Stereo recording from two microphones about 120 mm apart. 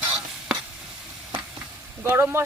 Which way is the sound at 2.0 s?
20° right (ahead or behind).